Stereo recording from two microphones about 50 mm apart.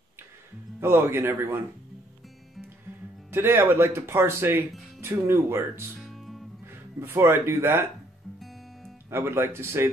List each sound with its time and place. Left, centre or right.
0.7 s speech: right
3.3 s speech: right
5.9 s music: centre
7.0 s speech: right
9.1 s speech: right